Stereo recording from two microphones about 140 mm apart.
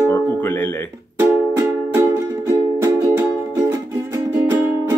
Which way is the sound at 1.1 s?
15° right (ahead or behind).